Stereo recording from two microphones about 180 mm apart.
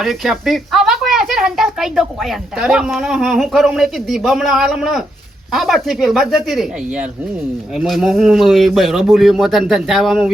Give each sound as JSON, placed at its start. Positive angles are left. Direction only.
{"t": 0.0, "sound": "speech", "side_deg": 0}